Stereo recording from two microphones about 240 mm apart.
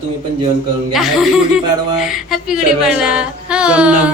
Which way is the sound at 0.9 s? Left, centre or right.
Centre.